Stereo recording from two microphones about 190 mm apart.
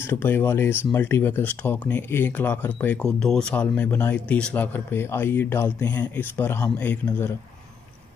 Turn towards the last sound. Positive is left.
turn(degrees=10)  # may be behind; listen again after turning